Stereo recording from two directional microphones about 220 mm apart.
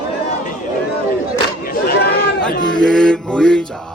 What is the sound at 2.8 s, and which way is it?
Mantra, 5° left (ahead or behind).